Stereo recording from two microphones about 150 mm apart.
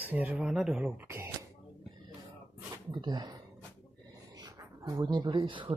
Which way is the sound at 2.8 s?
30° right (ahead or behind).